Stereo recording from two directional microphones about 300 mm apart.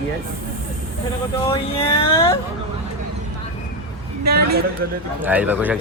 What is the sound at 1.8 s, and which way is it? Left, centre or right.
Speech, centre.